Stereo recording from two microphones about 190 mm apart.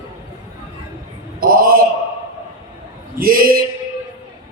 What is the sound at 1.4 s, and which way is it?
Speech, 50° right (ahead or behind).